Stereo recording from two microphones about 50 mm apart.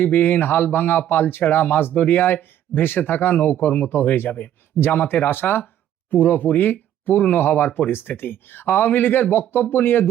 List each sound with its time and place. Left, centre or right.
0.0 s speech: left